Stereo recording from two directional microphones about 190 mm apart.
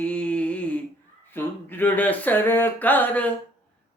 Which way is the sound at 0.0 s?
5° left (ahead or behind).